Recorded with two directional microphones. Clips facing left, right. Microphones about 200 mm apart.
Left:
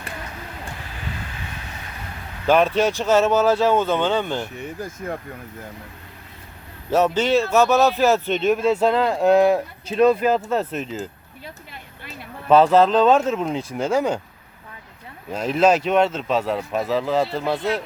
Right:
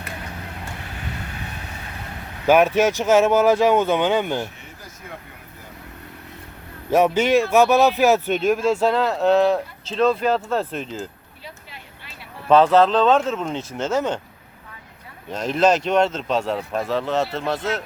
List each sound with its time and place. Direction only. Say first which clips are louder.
2.5 s speech: right 2 dB; 10° right (ahead or behind)
4.5 s speech: left 12 dB; 50° left (ahead or behind)
6.9 s speech: right 1 dB; 10° right (ahead or behind)
8.6 s speech: left 1 dB; 5° left (ahead or behind)
12.5 s speech: even; 5° left (ahead or behind)
15.3 s speech: left 1 dB; 5° left (ahead or behind)